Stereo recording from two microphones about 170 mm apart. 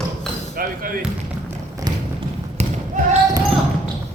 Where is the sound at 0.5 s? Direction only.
55° right (ahead or behind).